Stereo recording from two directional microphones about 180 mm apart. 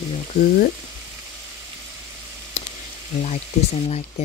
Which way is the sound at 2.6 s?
35° left (ahead or behind).